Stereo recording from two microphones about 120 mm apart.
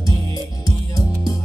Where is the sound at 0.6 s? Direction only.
30° left (ahead or behind).